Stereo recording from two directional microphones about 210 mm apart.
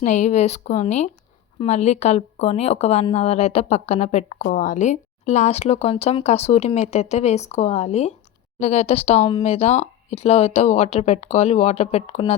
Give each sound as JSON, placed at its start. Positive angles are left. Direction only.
{"t": 0.0, "sound": "speech", "side_deg": 35}